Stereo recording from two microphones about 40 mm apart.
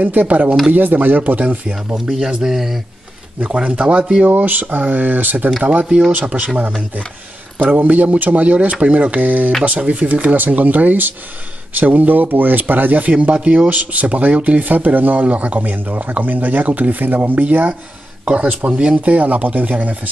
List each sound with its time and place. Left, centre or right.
0.0 s speech: right
2.0 s speech: centre
3.3 s speech: right
4.3 s speech: right
7.7 s speech: right